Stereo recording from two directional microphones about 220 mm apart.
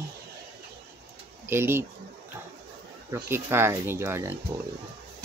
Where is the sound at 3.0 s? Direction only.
10° right (ahead or behind).